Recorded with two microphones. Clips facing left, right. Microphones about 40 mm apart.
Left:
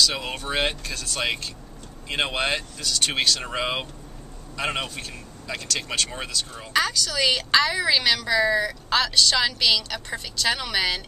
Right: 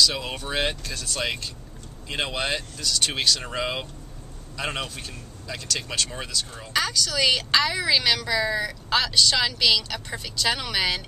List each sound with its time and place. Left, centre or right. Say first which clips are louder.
0.0 s speech: even; centre
3.2 s speech: left 1 dB; centre